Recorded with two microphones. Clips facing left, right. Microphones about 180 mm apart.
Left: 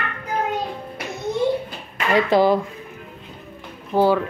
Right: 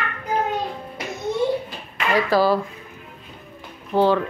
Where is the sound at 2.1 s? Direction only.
20° left (ahead or behind).